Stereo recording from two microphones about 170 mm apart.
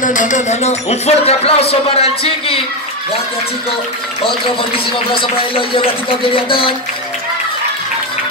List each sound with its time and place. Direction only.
0.0 s speech: 50° left (ahead or behind)
4.2 s speech: 30° left (ahead or behind)